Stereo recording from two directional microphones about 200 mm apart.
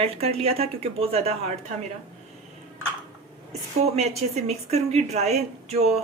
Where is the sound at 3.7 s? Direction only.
30° right (ahead or behind).